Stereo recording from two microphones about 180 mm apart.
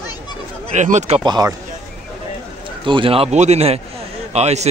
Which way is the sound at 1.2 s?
25° right (ahead or behind).